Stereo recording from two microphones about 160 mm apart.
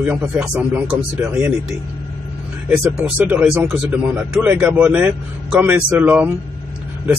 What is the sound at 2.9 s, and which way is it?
A man's voice, 10° right (ahead or behind).